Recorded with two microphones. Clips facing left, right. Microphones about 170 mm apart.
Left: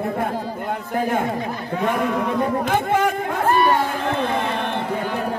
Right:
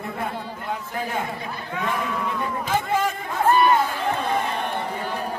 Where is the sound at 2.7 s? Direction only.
60° left (ahead or behind).